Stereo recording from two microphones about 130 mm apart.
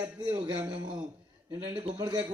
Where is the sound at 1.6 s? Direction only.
50° right (ahead or behind).